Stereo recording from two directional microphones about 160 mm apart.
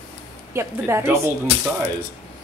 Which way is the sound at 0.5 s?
15° right (ahead or behind).